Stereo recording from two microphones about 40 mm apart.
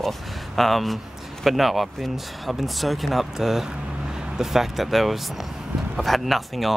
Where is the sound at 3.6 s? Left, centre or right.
Centre.